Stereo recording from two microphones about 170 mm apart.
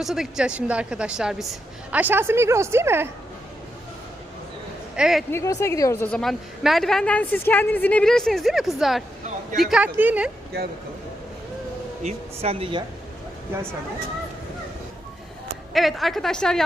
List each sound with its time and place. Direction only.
0.0 s a woman's voice: centre (ahead or behind)
4.9 s speech: 5° right (ahead or behind)
5.3 s speech: 15° left (ahead or behind)
6.1 s a woman's voice: centre (ahead or behind)
12.0 s speech: 35° right (ahead or behind)
15.7 s a woman's voice: centre (ahead or behind)